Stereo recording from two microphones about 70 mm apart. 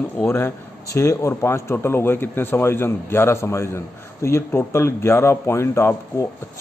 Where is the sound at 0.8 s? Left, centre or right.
Left.